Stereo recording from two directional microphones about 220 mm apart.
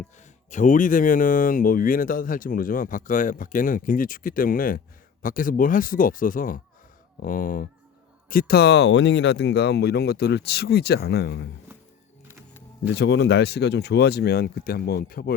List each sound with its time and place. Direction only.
0.5 s speech: 35° left (ahead or behind)
12.9 s speech: 50° left (ahead or behind)